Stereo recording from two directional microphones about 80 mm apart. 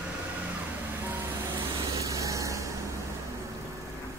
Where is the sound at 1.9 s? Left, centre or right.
Right.